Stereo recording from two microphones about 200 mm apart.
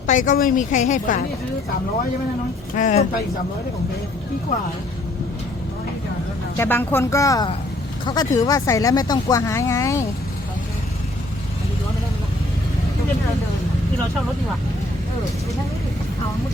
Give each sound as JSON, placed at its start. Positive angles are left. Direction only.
{"t": 0.1, "sound": "a woman's voice", "side_deg": 40}
{"t": 2.7, "sound": "a woman's voice", "side_deg": 40}
{"t": 6.6, "sound": "speech", "side_deg": 10}